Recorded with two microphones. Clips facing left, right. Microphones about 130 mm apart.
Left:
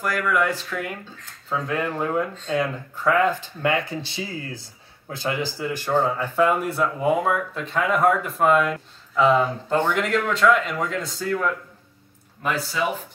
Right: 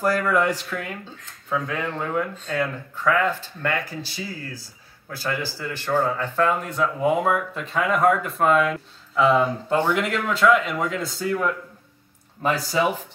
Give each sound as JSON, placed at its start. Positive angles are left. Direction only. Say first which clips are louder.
{"t": 0.0, "sound": "speech", "louder": "right 2 dB", "side_deg": -35}
{"t": 0.7, "sound": "speech", "louder": "left 1 dB", "side_deg": 0}
{"t": 12.4, "sound": "speech", "louder": "right 4 dB", "side_deg": -35}